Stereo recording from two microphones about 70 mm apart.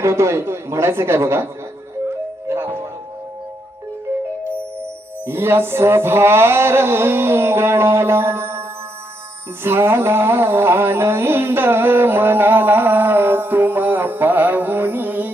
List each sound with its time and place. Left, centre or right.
0.0 s a man's voice: right
2.0 s music: right
4.4 s music: right
9.6 s music: right